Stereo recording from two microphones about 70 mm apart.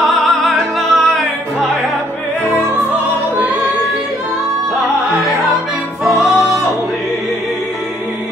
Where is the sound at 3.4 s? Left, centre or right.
Right.